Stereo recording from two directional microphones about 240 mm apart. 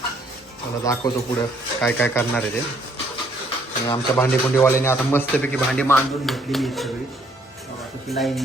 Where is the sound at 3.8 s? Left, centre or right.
Centre.